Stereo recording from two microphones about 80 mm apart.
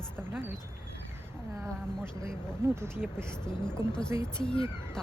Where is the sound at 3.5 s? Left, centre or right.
Centre.